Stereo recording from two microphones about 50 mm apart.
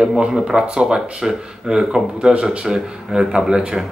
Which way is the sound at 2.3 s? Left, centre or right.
Right.